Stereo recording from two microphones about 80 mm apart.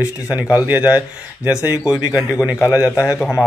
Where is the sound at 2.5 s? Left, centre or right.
Left.